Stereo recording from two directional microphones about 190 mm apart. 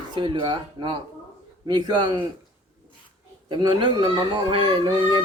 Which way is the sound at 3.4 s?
25° right (ahead or behind).